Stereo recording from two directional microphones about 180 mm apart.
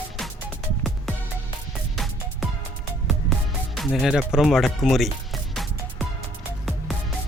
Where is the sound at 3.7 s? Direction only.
Centre (ahead or behind).